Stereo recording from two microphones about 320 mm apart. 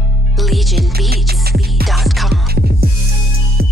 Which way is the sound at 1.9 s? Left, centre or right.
Centre.